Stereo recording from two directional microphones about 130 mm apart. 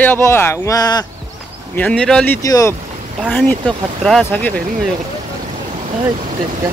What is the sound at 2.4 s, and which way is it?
Speech, 25° left (ahead or behind).